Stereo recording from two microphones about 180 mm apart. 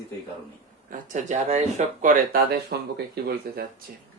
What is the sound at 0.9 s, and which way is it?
Speech, 45° right (ahead or behind).